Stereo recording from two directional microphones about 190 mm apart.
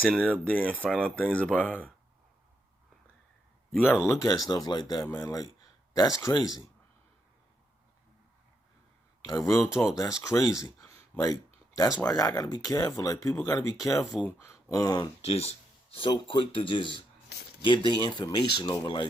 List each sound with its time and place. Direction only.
0.1 s speech: 5° left (ahead or behind)
3.7 s speech: 5° left (ahead or behind)
4.0 s speech: 15° left (ahead or behind)
9.2 s speech: 15° left (ahead or behind)
15.2 s speech: 30° left (ahead or behind)